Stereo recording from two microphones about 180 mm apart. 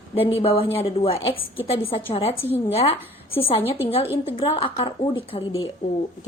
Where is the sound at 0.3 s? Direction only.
30° left (ahead or behind).